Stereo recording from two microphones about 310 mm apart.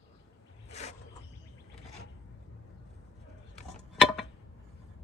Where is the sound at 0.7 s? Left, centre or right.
Left.